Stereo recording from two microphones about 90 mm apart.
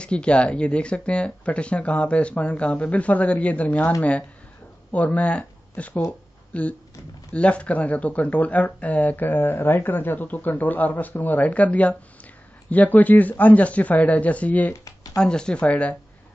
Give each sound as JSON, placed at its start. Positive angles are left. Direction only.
{"t": 0.0, "sound": "speech", "side_deg": 10}
{"t": 4.9, "sound": "speech", "side_deg": 15}